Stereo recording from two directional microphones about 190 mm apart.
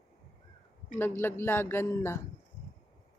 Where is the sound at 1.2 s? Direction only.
10° left (ahead or behind).